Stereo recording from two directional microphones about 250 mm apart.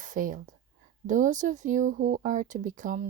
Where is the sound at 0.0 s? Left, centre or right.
Right.